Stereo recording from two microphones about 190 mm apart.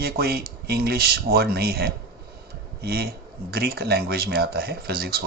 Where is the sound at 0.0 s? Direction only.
55° right (ahead or behind).